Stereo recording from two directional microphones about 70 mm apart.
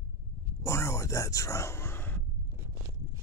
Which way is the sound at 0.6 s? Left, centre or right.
Left.